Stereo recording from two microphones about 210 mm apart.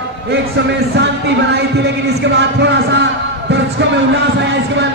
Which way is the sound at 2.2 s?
55° right (ahead or behind).